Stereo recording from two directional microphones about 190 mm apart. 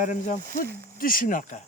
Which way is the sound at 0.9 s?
50° left (ahead or behind).